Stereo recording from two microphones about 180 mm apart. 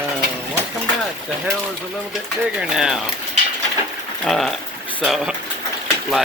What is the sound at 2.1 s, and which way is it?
Speech, 5° right (ahead or behind).